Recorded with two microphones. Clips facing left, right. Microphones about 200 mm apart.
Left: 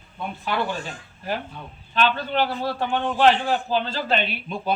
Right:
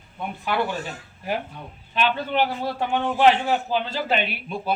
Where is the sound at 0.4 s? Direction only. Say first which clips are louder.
Right 1 dB; 10° right (ahead or behind).